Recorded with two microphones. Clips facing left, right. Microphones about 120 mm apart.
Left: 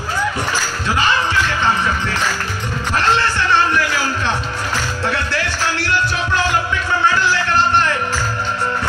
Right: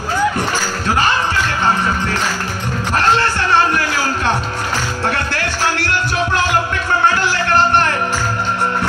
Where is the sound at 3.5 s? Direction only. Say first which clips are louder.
Right 1 dB; 45° right (ahead or behind).